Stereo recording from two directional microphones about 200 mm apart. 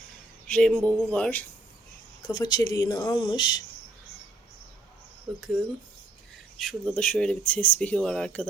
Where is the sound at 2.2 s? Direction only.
20° left (ahead or behind).